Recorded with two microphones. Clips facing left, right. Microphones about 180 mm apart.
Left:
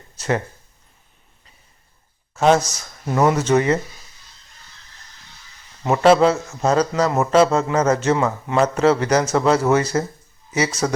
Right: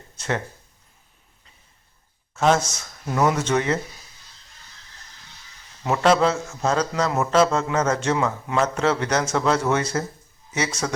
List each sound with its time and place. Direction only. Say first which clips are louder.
0.2 s speech: left 5 dB; 5° left (ahead or behind)
2.3 s speech: left 4 dB; centre (ahead or behind)
2.6 s speech: left 3 dB; 35° left (ahead or behind)
3.2 s a man's voice: left 4 dB; 5° left (ahead or behind)
5.8 s a man's voice: left 5 dB; 5° left (ahead or behind)
10.8 s a man's voice: left 6 dB; 10° left (ahead or behind)